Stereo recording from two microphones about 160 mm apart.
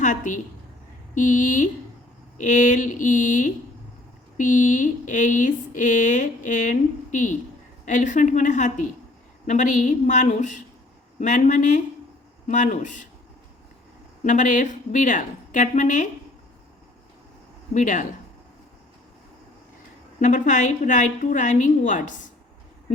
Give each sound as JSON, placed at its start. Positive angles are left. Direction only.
{"t": 0.0, "sound": "a woman's voice", "side_deg": 50}
{"t": 14.3, "sound": "speech", "side_deg": 50}
{"t": 17.7, "sound": "speech", "side_deg": 50}
{"t": 20.1, "sound": "speech", "side_deg": 50}